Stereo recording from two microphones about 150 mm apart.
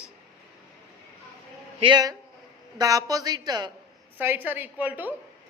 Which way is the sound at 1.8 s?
30° right (ahead or behind).